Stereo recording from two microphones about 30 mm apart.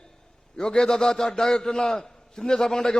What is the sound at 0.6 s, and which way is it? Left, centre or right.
A man's voice, left.